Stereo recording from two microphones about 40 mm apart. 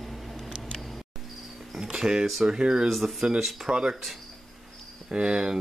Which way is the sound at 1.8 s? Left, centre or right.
Centre.